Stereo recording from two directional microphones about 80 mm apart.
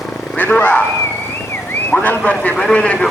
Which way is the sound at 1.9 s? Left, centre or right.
Centre.